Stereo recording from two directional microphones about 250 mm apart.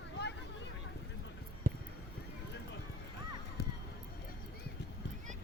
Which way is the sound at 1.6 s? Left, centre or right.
Right.